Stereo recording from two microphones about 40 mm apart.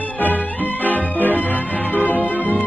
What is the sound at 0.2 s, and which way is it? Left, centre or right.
Music, left.